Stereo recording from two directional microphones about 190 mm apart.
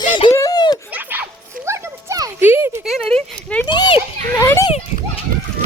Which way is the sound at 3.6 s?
25° left (ahead or behind).